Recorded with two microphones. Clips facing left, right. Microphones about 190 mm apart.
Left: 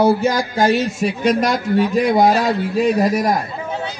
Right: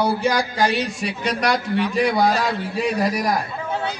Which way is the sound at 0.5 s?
45° left (ahead or behind).